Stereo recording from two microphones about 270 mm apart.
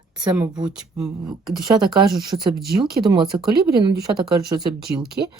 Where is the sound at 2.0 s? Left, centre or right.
Centre.